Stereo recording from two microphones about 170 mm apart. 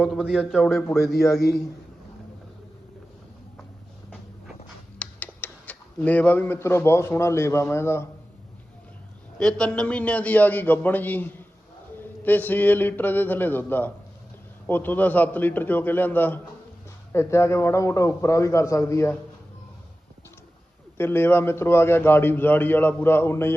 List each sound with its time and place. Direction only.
0.0 s a man's voice: centre (ahead or behind)
4.9 s speech: 10° left (ahead or behind)
9.4 s a man's voice: 5° left (ahead or behind)
21.0 s a man's voice: 15° left (ahead or behind)